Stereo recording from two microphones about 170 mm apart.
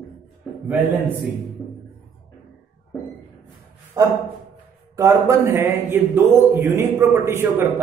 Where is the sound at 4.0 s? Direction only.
25° right (ahead or behind).